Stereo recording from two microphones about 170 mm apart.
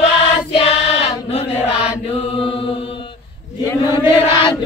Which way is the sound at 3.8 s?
25° left (ahead or behind).